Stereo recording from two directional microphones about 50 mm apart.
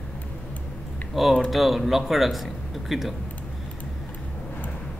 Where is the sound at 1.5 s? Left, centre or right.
Centre.